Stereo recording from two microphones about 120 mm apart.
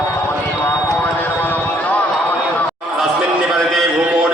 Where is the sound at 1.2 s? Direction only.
15° left (ahead or behind).